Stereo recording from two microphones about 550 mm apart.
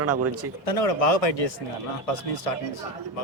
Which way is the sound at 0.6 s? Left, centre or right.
Left.